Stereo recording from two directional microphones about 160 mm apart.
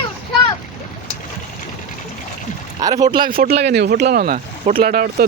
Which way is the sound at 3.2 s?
70° right (ahead or behind).